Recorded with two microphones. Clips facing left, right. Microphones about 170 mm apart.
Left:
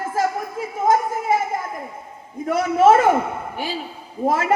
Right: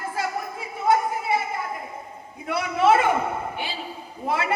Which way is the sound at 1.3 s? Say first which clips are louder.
Left 5 dB; 45° left (ahead or behind).